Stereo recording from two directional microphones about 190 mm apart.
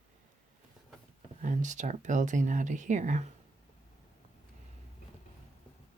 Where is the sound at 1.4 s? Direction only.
40° right (ahead or behind).